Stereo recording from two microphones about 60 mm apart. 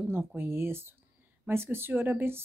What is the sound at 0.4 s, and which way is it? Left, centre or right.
Speech, right.